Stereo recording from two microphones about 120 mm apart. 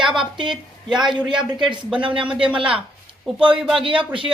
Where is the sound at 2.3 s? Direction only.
10° right (ahead or behind).